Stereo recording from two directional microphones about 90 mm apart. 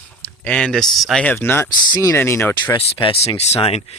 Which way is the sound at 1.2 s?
20° left (ahead or behind).